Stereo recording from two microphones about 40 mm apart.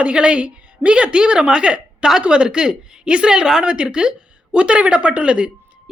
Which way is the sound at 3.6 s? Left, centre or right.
Right.